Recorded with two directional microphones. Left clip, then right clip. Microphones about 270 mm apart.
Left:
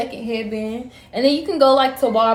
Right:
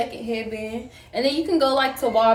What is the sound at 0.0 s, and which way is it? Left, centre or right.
A woman's voice, centre.